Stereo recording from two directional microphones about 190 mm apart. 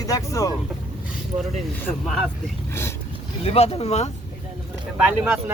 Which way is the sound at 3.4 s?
30° left (ahead or behind).